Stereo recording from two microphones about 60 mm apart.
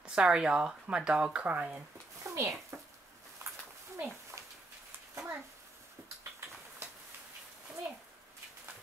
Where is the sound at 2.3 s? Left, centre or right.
Right.